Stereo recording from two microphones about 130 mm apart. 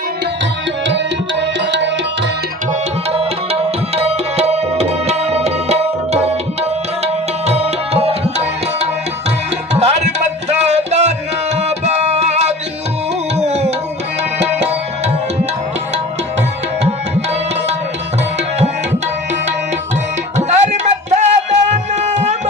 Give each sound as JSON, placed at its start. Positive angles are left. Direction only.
{"t": 3.1, "sound": "tabla", "side_deg": -50}
{"t": 9.7, "sound": "music", "side_deg": -55}
{"t": 13.4, "sound": "tabla", "side_deg": -55}
{"t": 14.4, "sound": "music", "side_deg": -60}
{"t": 20.3, "sound": "music", "side_deg": -60}